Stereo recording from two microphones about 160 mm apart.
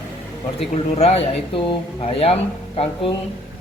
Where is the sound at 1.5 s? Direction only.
35° left (ahead or behind).